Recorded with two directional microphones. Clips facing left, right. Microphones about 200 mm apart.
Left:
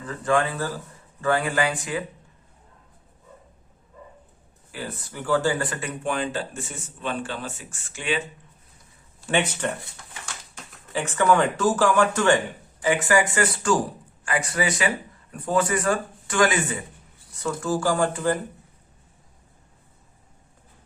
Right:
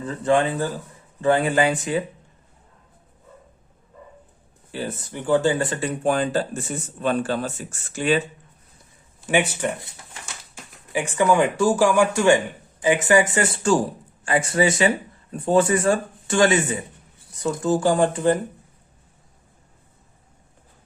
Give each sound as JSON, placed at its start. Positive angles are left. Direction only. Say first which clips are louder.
{"t": 0.0, "sound": "speech", "louder": "right 3 dB", "side_deg": -25}
{"t": 4.7, "sound": "speech", "louder": "right 5 dB", "side_deg": -25}
{"t": 9.2, "sound": "speech", "louder": "right 3 dB", "side_deg": -10}